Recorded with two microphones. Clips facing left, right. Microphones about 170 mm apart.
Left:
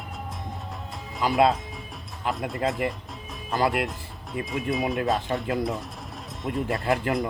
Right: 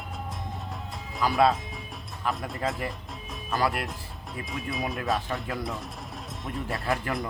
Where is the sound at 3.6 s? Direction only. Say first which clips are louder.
Left 4 dB; 20° left (ahead or behind).